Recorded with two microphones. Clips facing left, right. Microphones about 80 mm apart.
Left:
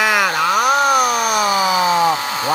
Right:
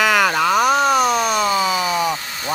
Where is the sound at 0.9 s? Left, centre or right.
Left.